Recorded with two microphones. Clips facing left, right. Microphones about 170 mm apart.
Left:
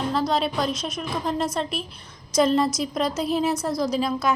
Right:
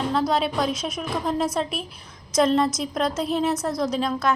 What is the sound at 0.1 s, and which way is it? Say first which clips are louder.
A woman's voice: right 1 dB; centre (ahead or behind).